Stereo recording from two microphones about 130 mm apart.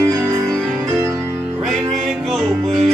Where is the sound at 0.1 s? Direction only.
25° right (ahead or behind).